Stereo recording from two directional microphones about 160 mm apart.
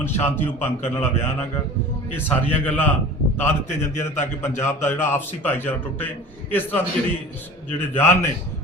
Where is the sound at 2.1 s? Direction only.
10° left (ahead or behind).